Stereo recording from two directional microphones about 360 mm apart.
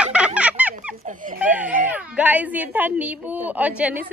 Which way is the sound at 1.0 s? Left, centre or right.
Right.